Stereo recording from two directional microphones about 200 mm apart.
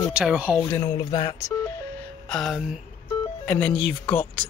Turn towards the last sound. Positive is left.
turn(degrees=5)  # may be behind; listen again after turning